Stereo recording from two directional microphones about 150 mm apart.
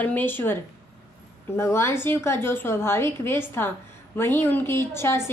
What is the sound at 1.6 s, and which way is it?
Speech, 20° left (ahead or behind).